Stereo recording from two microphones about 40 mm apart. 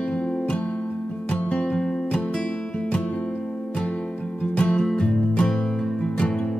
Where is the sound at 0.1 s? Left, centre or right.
Left.